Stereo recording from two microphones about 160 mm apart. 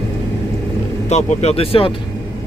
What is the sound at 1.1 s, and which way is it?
Speech, 45° left (ahead or behind).